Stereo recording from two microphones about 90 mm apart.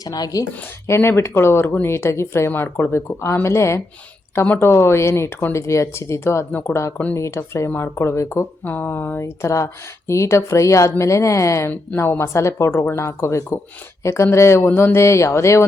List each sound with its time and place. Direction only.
0.0 s speech: 45° left (ahead or behind)
0.9 s speech: 30° left (ahead or behind)
4.4 s speech: 20° left (ahead or behind)
4.7 s speech: 30° left (ahead or behind)
8.6 s speech: 20° left (ahead or behind)